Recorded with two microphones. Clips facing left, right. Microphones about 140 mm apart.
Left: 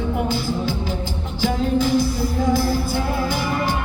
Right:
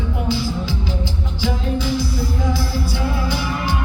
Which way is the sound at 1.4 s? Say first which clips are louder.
Left 3 dB; 50° left (ahead or behind).